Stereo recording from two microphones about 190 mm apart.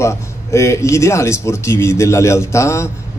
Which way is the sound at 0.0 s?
15° left (ahead or behind).